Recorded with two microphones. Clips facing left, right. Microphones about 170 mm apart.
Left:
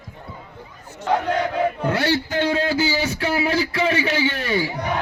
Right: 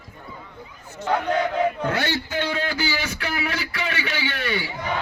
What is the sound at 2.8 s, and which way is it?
A man's voice, 35° left (ahead or behind).